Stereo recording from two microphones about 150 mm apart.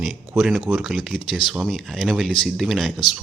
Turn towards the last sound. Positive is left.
turn(degrees=-5)  # may be behind; listen again after turning